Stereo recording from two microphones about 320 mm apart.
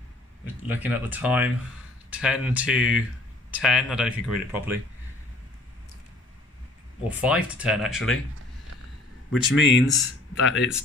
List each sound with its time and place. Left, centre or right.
0.6 s speech: centre
7.1 s speech: centre
9.3 s speech: left